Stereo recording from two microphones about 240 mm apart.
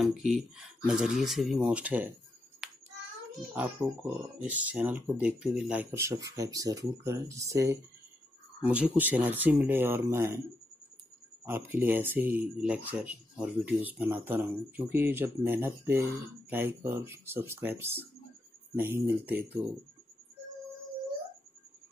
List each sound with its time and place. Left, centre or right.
0.0 s speech: centre
2.6 s child singing: centre
3.3 s speech: centre
11.4 s speech: centre